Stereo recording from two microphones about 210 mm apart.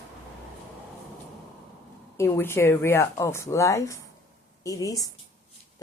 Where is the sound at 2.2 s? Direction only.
10° left (ahead or behind).